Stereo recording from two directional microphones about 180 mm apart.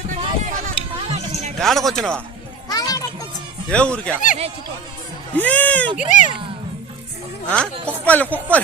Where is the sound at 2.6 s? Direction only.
20° left (ahead or behind).